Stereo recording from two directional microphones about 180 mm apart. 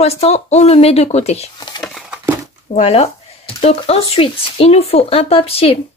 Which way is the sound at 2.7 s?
35° left (ahead or behind).